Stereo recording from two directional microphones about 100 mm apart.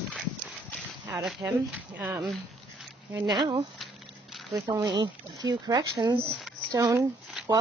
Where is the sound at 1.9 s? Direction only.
15° right (ahead or behind).